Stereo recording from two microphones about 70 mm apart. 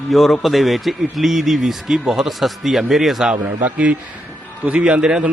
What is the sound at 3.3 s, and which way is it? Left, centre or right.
Speech, right.